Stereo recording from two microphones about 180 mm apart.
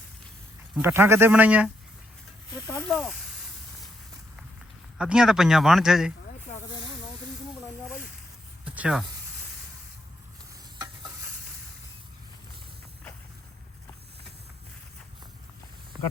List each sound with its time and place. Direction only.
0.8 s a man's voice: 10° right (ahead or behind)
2.5 s speech: 20° left (ahead or behind)
2.8 s a man's voice: centre (ahead or behind)
4.9 s a man's voice: 5° right (ahead or behind)
8.6 s a sound: 10° right (ahead or behind)